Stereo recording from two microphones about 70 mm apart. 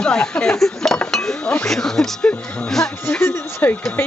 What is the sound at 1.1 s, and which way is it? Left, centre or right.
Chink, centre.